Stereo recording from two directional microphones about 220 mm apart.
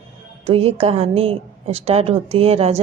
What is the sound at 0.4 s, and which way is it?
A woman's voice, 25° right (ahead or behind).